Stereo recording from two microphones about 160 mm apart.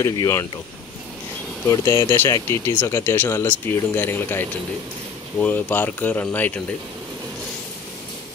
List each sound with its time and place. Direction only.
0.0 s speech: 20° left (ahead or behind)
1.7 s speech: 20° left (ahead or behind)